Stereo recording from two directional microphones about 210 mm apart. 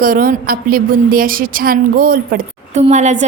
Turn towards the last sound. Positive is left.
turn(degrees=-35)  # may be behind; listen again after turning